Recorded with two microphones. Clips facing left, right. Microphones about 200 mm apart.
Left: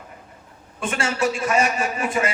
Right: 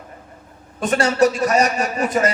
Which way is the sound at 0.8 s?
40° right (ahead or behind).